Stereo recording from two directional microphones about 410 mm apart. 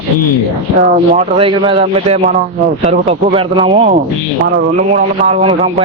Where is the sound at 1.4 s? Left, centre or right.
Centre.